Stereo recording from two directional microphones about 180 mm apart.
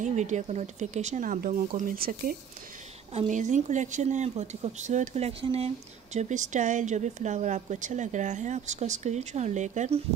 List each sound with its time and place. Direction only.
0.0 s speech: 40° right (ahead or behind)
3.1 s a woman's voice: 40° right (ahead or behind)